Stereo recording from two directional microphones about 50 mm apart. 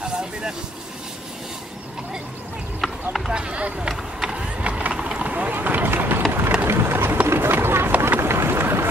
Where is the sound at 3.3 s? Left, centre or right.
Right.